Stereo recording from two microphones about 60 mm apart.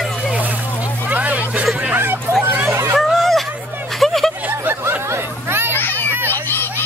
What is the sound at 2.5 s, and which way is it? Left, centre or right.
Hubbub, right.